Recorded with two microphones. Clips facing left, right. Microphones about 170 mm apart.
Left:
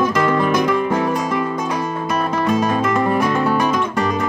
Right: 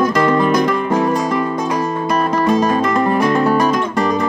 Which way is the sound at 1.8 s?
40° right (ahead or behind).